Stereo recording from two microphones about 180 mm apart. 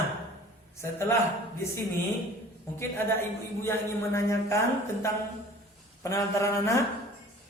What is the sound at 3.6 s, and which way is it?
Speech, 15° left (ahead or behind).